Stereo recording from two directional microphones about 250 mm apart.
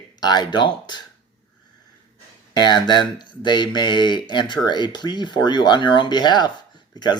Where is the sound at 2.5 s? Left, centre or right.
Centre.